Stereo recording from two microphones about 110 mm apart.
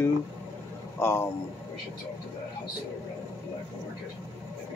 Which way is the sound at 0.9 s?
20° left (ahead or behind).